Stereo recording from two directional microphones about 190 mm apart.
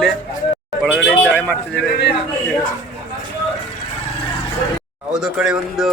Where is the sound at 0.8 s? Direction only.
5° left (ahead or behind).